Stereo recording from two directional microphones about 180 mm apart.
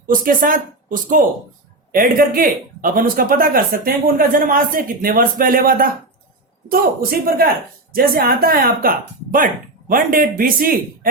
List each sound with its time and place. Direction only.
0.1 s speech: 50° right (ahead or behind)